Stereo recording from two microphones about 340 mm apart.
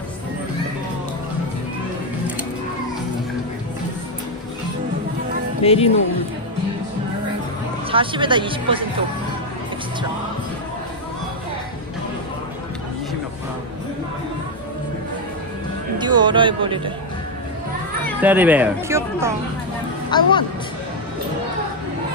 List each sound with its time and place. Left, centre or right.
5.6 s speech: centre
7.9 s speech: centre
16.0 s speech: centre
18.0 s speech: centre
20.1 s a woman's voice: centre